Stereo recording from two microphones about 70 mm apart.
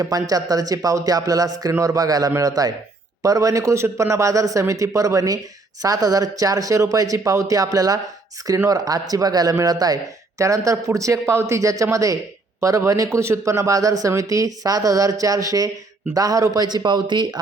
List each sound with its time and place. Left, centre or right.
0.0 s a man's voice: right